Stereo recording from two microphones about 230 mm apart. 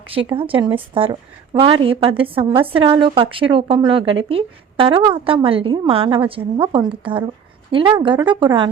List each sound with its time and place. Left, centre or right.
0.3 s a woman's voice: right